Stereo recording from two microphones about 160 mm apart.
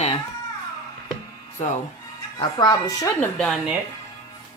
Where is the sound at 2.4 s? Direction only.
25° left (ahead or behind).